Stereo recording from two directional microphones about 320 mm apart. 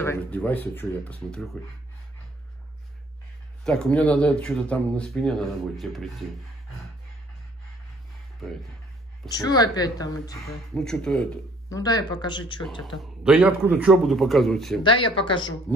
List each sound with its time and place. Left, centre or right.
0.0 s a man's voice: centre
3.6 s a man's voice: centre
9.3 s speech: centre
13.0 s a man's voice: centre
14.8 s speech: centre